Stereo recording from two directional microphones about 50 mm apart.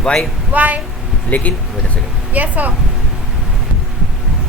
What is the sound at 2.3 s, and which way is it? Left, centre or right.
Speech, right.